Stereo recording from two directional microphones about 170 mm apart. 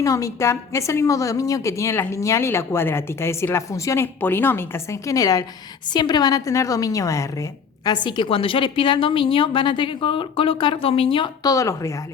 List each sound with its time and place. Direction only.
0.0 s a woman's voice: 20° left (ahead or behind)